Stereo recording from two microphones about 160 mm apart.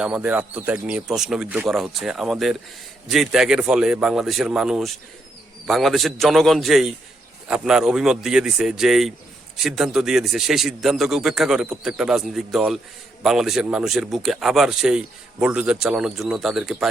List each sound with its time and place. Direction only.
0.0 s speech: 5° right (ahead or behind)